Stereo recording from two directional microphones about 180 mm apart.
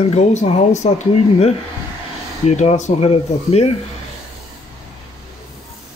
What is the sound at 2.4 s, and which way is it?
Speech, 40° left (ahead or behind).